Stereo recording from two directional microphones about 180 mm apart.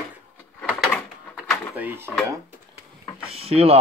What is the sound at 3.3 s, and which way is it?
Speech, 35° right (ahead or behind).